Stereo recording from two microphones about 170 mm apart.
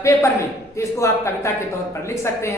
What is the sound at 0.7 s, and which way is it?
A woman's voice, 15° left (ahead or behind).